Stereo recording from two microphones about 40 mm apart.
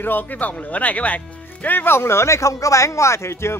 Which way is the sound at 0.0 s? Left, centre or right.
Left.